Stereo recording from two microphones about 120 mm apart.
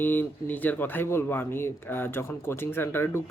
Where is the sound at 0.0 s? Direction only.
15° left (ahead or behind).